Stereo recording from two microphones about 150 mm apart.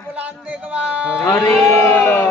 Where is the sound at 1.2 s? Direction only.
20° left (ahead or behind).